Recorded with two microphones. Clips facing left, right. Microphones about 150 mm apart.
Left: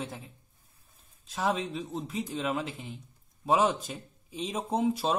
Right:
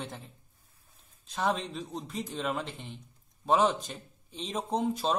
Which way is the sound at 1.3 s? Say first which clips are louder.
Left 1 dB; centre (ahead or behind).